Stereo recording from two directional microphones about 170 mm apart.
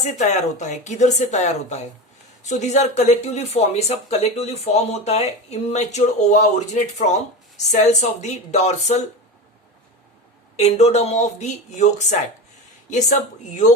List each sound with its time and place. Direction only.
0.2 s speech: 45° left (ahead or behind)
10.6 s speech: 40° left (ahead or behind)